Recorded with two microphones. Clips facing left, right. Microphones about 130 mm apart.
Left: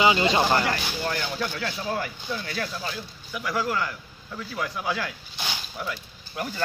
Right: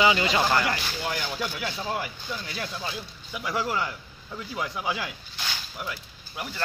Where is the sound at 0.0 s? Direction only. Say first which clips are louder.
Left 2 dB; 25° left (ahead or behind).